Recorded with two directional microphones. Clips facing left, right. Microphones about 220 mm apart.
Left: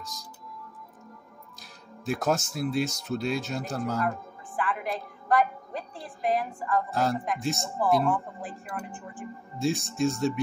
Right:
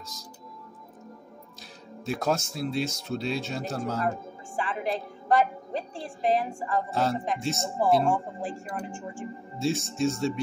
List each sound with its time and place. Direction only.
2.0 s speech: centre (ahead or behind)
4.0 s a woman's voice: 30° right (ahead or behind)
6.9 s speech: centre (ahead or behind)
8.0 s speech: 30° right (ahead or behind)
9.6 s speech: centre (ahead or behind)